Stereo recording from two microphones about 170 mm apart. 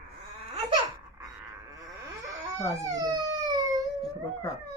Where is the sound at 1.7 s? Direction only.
20° right (ahead or behind).